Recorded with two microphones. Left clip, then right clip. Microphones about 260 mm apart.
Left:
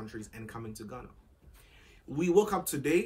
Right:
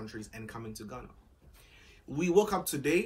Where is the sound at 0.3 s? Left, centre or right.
Centre.